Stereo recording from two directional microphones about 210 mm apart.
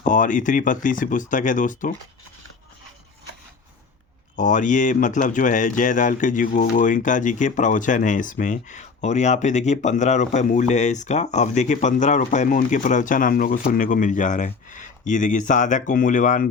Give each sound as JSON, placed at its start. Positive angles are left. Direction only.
{"t": 0.0, "sound": "speech", "side_deg": 40}
{"t": 4.4, "sound": "speech", "side_deg": 35}